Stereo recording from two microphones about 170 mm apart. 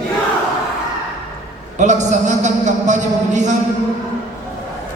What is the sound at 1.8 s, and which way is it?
A man's voice, 45° right (ahead or behind).